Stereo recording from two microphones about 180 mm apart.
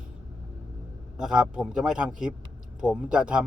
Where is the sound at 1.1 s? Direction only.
5° right (ahead or behind).